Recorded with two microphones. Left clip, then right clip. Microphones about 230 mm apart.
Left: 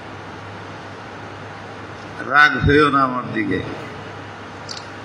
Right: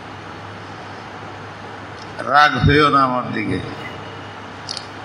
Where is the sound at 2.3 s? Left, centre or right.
Right.